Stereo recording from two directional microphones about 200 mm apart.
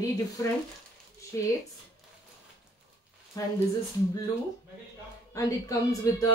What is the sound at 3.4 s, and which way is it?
Speech, 15° left (ahead or behind).